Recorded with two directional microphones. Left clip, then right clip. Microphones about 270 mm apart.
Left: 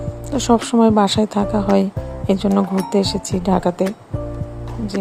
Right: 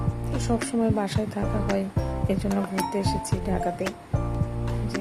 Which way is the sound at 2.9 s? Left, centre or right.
Left.